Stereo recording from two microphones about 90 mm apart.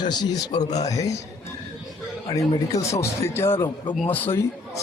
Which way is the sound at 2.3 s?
40° left (ahead or behind).